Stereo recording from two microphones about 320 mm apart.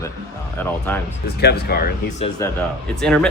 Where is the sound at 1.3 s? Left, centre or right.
Left.